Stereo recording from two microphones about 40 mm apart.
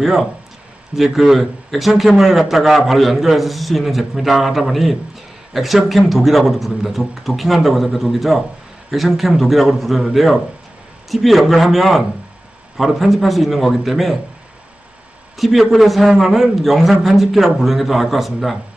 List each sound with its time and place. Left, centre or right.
0.0 s a man's voice: centre
15.3 s a man's voice: centre